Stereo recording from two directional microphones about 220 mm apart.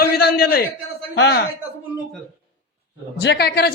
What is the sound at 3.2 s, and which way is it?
Speech, 50° left (ahead or behind).